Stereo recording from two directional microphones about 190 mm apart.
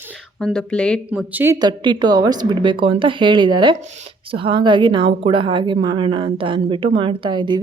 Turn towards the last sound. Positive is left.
turn(degrees=-25)  # may be behind; listen again after turning